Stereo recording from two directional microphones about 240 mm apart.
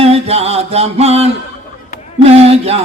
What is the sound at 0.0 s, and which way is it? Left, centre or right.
Music, right.